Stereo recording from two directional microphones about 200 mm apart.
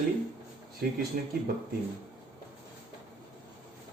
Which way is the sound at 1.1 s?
45° right (ahead or behind).